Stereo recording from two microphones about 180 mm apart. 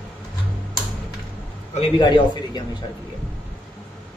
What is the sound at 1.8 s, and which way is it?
Speech, 25° left (ahead or behind).